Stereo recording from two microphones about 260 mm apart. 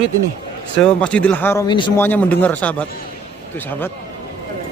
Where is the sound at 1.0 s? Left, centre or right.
Centre.